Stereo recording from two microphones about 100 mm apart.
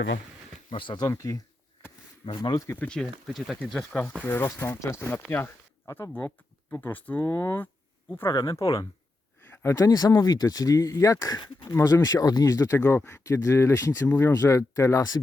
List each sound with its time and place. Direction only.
0.7 s speech: 55° left (ahead or behind)
1.0 s speech: 30° left (ahead or behind)
2.2 s speech: 55° left (ahead or behind)
2.6 s speech: 15° left (ahead or behind)
4.2 s speech: 20° left (ahead or behind)
7.2 s speech: 30° left (ahead or behind)
8.3 s speech: 40° left (ahead or behind)
9.5 s speech: 25° left (ahead or behind); by 11.8 s 45° left (ahead or behind)
11.8 s speech: 30° left (ahead or behind)
14.1 s speech: 20° left (ahead or behind)
14.3 s speech: 30° left (ahead or behind)